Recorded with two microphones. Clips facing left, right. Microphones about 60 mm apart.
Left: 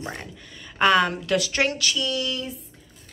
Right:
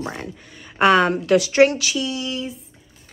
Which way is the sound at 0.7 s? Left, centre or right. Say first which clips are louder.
Right 4 dB; right.